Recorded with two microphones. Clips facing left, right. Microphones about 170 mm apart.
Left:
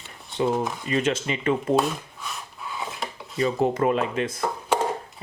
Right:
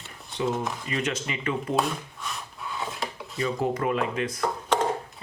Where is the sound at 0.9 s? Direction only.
30° left (ahead or behind).